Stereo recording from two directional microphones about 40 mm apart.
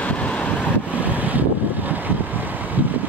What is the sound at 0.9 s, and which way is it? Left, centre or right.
Vehicle, right.